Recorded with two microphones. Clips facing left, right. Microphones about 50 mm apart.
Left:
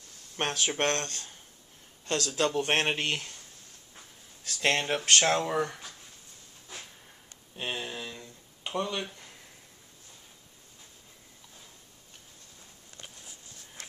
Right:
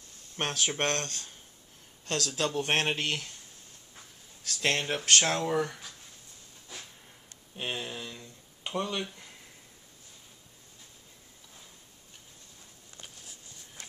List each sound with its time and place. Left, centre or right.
0.4 s speech: centre
1.0 s speech: left
2.2 s speech: centre
4.5 s speech: centre
7.5 s a sound: centre
8.7 s speech: centre